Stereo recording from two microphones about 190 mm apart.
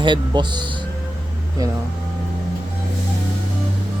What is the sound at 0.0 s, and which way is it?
Speech, 25° right (ahead or behind).